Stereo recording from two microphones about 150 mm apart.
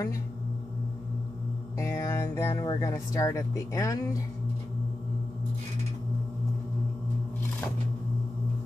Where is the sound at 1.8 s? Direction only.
20° left (ahead or behind).